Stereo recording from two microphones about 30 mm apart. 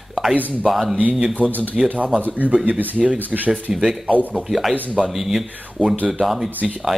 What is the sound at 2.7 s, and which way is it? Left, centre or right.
Speech, right.